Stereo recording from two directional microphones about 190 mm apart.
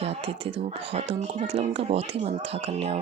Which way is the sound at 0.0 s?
30° right (ahead or behind).